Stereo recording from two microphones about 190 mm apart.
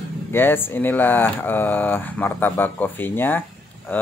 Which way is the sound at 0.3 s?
10° left (ahead or behind).